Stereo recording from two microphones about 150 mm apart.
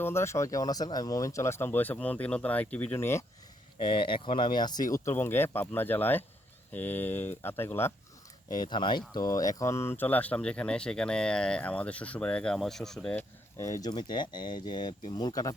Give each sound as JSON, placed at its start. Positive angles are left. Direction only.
{"t": 0.0, "sound": "speech", "side_deg": 15}
{"t": 3.8, "sound": "speech", "side_deg": 35}
{"t": 8.4, "sound": "speech", "side_deg": 30}
{"t": 13.8, "sound": "speech", "side_deg": 30}